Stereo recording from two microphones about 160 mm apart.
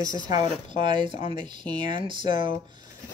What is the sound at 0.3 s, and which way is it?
Speech, 30° right (ahead or behind).